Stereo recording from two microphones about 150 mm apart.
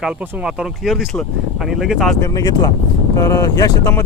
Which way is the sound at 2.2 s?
25° left (ahead or behind).